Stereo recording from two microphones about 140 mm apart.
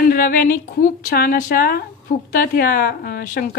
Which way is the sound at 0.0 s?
90° left.